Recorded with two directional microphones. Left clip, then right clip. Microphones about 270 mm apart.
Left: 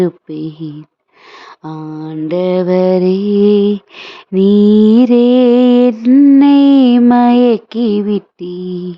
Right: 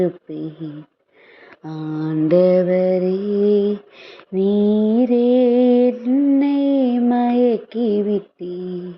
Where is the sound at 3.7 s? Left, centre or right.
Left.